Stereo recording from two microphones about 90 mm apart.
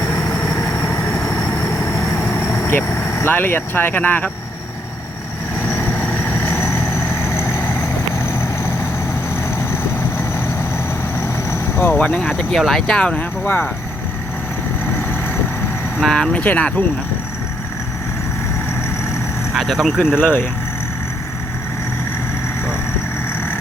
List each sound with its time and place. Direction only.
0.1 s vehicle: 35° left (ahead or behind)
2.1 s speech: 25° left (ahead or behind)
5.6 s vehicle: 25° left (ahead or behind)
11.2 s vehicle: 30° left (ahead or behind)
11.9 s speech: 15° left (ahead or behind)
13.4 s speech: 25° left (ahead or behind)
16.0 s speech: 5° left (ahead or behind)
16.3 s speech: 15° left (ahead or behind)
19.5 s speech: centre (ahead or behind)
20.2 s speech: 20° left (ahead or behind)